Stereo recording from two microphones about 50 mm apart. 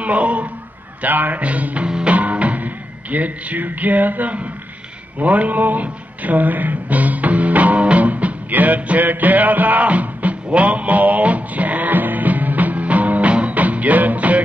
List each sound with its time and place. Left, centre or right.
0.0 s speech: right
1.0 s music: right